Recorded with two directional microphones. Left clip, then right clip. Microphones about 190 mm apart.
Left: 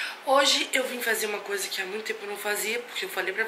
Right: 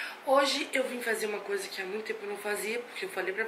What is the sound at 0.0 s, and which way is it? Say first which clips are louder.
Speech: left 4 dB; 5° right (ahead or behind).